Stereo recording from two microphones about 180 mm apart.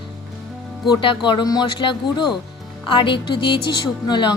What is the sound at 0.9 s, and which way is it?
A woman's voice, 25° left (ahead or behind).